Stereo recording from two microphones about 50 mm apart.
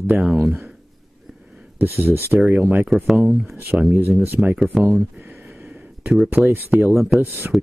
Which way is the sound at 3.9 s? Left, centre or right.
Right.